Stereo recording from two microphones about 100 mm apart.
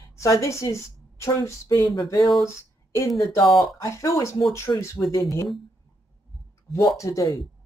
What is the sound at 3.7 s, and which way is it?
Speech, 35° left (ahead or behind).